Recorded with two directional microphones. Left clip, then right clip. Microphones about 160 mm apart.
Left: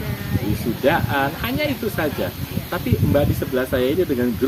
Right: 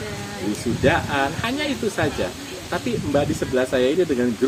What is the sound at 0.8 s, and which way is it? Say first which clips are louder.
Speech: left 1 dB; 15° right (ahead or behind).